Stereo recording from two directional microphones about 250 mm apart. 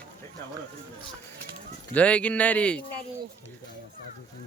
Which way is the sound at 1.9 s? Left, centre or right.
Centre.